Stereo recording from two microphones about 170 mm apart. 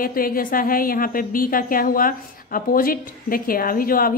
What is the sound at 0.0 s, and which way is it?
A woman's voice, 55° left (ahead or behind).